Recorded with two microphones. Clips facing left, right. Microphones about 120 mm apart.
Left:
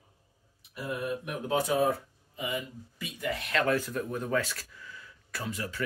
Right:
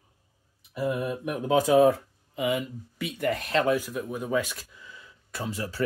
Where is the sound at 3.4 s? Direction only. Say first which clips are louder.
Right 1 dB; 35° right (ahead or behind).